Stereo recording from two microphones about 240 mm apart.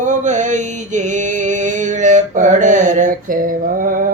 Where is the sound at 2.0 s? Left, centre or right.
Right.